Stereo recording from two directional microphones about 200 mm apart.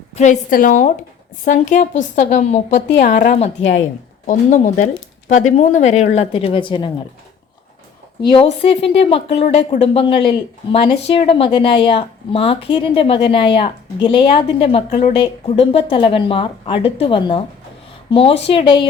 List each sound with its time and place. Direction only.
0.2 s a woman's voice: 40° left (ahead or behind); by 6.9 s 25° left (ahead or behind)
8.2 s a woman's voice: 25° left (ahead or behind)